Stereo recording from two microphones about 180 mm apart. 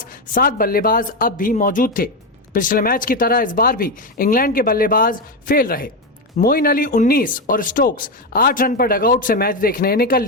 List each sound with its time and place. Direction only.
0.0 s speech: 50° left (ahead or behind)